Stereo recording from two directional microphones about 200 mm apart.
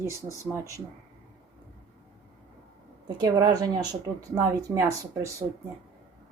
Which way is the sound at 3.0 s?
20° right (ahead or behind).